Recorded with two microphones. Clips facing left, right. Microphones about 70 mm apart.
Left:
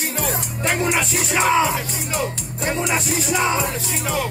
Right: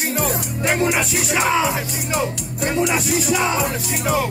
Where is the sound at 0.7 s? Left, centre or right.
Right.